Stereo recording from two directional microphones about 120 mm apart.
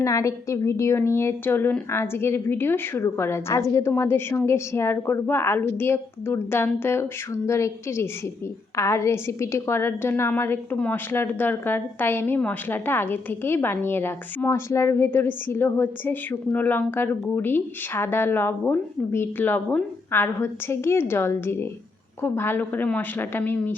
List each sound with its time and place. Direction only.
0.0 s a woman's voice: 25° left (ahead or behind)